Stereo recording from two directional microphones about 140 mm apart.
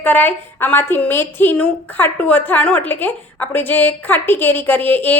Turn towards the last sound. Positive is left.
turn(degrees=10)  # may be behind; listen again after turning